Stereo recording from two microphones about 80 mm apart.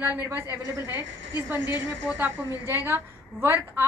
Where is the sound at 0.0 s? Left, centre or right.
Right.